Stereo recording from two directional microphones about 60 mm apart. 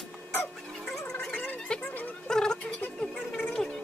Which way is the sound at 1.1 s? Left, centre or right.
Left.